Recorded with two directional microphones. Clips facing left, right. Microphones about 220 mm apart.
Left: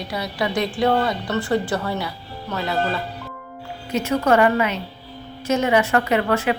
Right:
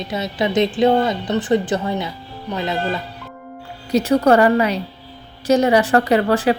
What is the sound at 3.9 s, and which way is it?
A woman's voice, 35° right (ahead or behind).